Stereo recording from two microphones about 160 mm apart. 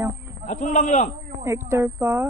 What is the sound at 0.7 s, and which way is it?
Speech, 50° left (ahead or behind).